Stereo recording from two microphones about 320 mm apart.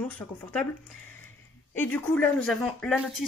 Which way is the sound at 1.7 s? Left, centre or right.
Centre.